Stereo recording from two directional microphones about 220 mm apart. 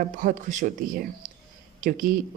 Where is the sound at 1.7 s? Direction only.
35° right (ahead or behind).